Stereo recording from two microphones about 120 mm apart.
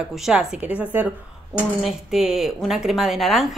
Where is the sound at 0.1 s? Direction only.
5° right (ahead or behind).